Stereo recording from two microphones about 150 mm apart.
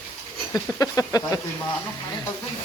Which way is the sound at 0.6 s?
20° left (ahead or behind).